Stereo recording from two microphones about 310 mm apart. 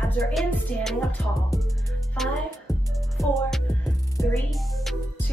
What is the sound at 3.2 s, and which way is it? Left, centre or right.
Music, centre.